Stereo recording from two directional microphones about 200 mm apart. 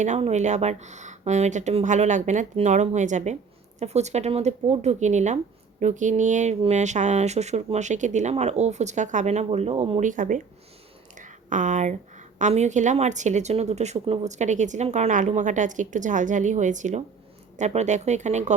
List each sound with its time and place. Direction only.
0.0 s speech: 35° right (ahead or behind)
11.2 s a sound: 40° right (ahead or behind)
12.4 s speech: 35° right (ahead or behind)